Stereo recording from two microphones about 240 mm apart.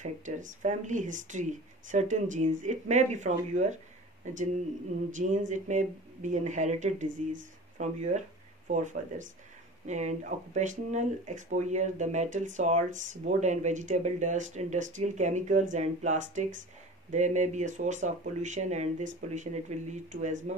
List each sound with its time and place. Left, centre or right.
0.0 s speech: right
5.1 s speech: right
7.1 s speech: right
7.8 s speech: right